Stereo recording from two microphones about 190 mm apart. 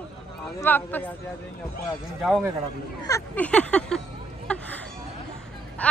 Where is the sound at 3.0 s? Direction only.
10° left (ahead or behind).